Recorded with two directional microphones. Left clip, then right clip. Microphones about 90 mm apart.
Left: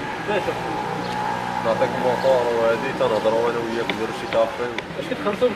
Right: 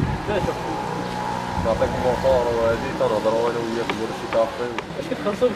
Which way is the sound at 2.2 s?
5° left (ahead or behind).